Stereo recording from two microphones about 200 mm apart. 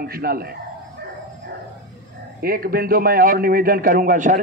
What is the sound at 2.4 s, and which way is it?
A man's voice, 45° right (ahead or behind).